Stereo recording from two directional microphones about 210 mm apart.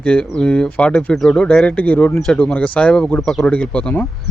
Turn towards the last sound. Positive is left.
turn(degrees=5)  # may be behind; listen again after turning